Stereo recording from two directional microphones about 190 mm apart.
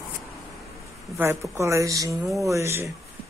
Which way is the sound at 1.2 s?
15° right (ahead or behind).